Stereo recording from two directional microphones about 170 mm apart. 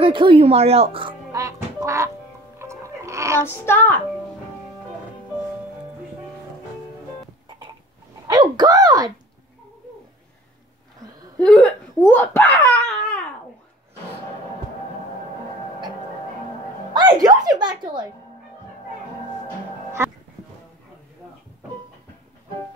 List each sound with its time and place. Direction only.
0.0 s speech: 30° right (ahead or behind)
1.3 s music: 20° right (ahead or behind)
3.3 s a child's voice: 15° left (ahead or behind)
7.4 s a sound: 25° right (ahead or behind)
8.4 s speech: 25° right (ahead or behind)
11.4 s laughter: 5° left (ahead or behind)
16.9 s speech: 25° right (ahead or behind)
20.0 s speech: 15° right (ahead or behind)